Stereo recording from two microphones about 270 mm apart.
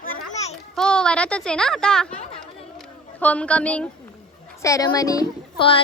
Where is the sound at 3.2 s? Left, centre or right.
Centre.